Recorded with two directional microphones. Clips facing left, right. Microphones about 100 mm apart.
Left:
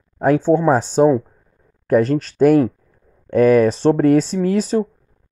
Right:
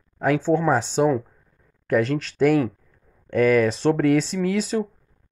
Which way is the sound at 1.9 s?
40° left (ahead or behind).